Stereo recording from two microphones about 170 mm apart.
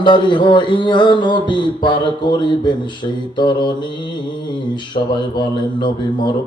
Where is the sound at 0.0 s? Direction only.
25° left (ahead or behind).